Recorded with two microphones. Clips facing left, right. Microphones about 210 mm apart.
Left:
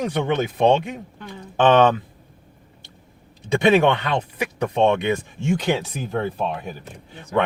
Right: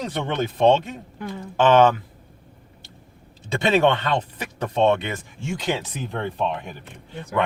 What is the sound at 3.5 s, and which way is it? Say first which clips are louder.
Speech: left 3 dB; 15° left (ahead or behind).